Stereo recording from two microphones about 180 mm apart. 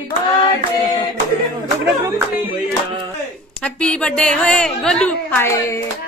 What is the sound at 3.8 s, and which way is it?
A woman's voice, 5° left (ahead or behind).